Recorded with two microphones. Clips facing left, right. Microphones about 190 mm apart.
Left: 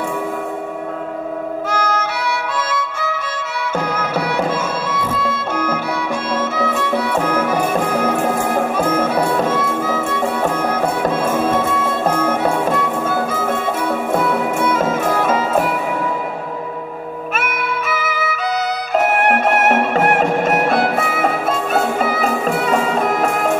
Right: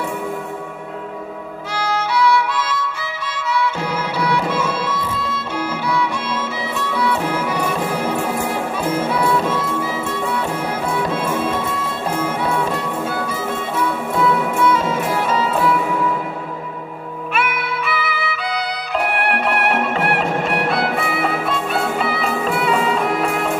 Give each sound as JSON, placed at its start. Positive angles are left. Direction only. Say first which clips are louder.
{"t": 1.7, "sound": "music", "louder": "right 2 dB", "side_deg": 50}
{"t": 17.3, "sound": "music", "louder": "right 1 dB", "side_deg": 45}